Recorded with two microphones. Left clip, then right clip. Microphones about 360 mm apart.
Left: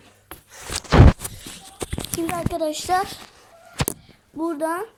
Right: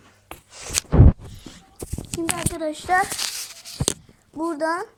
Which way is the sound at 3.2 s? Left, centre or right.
Right.